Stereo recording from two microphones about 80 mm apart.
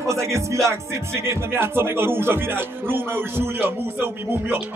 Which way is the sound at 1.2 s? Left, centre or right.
Right.